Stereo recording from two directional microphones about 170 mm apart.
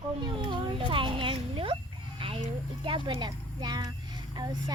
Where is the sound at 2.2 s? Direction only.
30° right (ahead or behind).